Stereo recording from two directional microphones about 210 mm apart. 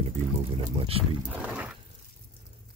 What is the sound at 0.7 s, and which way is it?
Speech, 25° right (ahead or behind).